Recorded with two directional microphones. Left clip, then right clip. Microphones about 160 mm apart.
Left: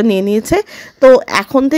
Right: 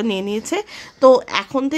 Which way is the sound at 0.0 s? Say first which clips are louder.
Left 9 dB; 30° left (ahead or behind).